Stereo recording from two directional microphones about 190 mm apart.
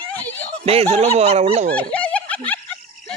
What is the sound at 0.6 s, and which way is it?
Speech, 35° right (ahead or behind).